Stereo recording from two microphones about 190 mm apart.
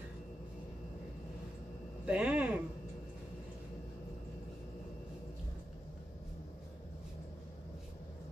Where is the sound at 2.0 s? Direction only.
5° right (ahead or behind).